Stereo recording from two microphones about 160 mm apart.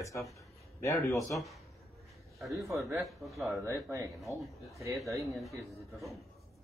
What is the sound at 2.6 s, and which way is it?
Speech, 20° right (ahead or behind).